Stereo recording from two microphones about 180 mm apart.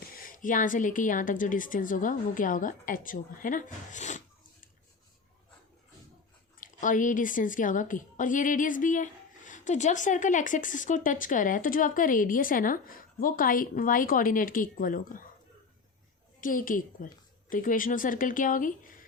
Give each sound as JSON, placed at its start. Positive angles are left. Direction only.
{"t": 0.1, "sound": "a woman's voice", "side_deg": 50}
{"t": 6.6, "sound": "a woman's voice", "side_deg": 45}
{"t": 16.4, "sound": "a woman's voice", "side_deg": 50}